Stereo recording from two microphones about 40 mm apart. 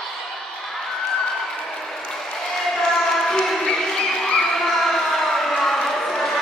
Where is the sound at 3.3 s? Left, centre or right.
Centre.